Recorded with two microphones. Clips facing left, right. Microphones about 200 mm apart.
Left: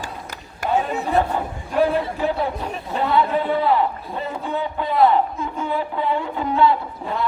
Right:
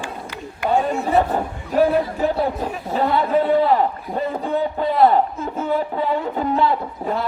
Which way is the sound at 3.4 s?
40° right (ahead or behind).